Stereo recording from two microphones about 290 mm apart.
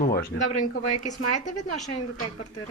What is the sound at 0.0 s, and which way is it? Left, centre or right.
Speech, left.